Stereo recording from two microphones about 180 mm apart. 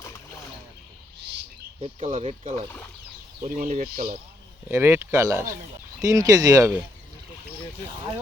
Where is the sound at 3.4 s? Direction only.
45° right (ahead or behind).